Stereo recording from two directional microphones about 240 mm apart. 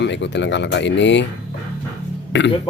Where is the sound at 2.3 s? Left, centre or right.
Left.